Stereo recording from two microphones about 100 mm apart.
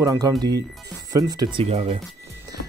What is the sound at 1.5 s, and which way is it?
Speech, 90° right.